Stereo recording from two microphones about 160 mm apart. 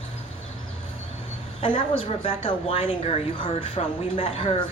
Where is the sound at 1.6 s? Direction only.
35° left (ahead or behind).